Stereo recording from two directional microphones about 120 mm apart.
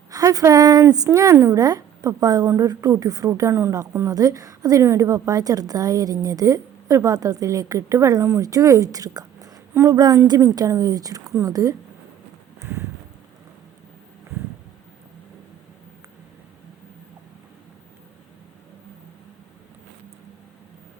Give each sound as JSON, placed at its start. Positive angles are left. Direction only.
{"t": 0.1, "sound": "speech", "side_deg": -30}
{"t": 12.5, "sound": "clip-clop", "side_deg": -20}